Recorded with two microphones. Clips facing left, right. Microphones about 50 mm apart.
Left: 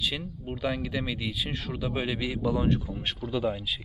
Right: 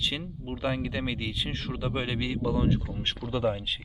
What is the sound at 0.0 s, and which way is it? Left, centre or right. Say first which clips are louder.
A man's voice: even; centre.